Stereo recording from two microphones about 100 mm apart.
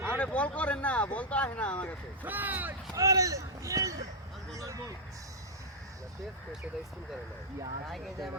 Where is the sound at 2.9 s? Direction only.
35° right (ahead or behind).